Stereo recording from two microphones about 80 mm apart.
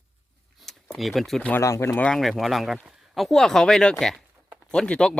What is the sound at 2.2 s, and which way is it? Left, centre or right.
Speech, centre.